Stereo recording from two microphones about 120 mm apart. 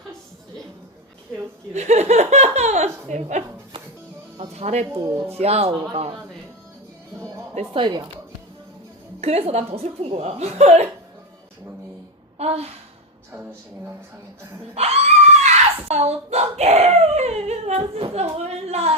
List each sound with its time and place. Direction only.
1.7 s laughter: 65° right (ahead or behind)
4.4 s music: 65° right (ahead or behind)
5.3 s speech: 60° right (ahead or behind)
7.5 s speech: 45° right (ahead or behind)
9.2 s speech: 60° right (ahead or behind)
12.4 s speech: 60° right (ahead or behind)
14.8 s speech: 60° right (ahead or behind)